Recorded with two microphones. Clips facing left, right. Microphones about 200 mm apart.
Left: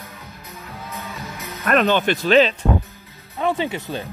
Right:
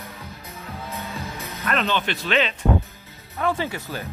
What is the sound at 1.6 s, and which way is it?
Speech, 50° left (ahead or behind).